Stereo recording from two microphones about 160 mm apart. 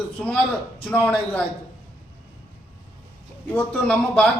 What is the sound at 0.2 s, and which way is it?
A man's voice, 10° left (ahead or behind).